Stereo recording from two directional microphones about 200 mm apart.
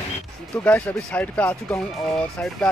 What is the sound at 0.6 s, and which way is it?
Speech, 5° left (ahead or behind).